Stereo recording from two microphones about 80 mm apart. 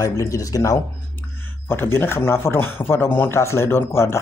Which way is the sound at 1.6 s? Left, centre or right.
Left.